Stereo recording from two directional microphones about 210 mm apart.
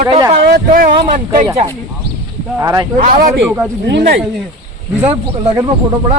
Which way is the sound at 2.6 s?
15° right (ahead or behind).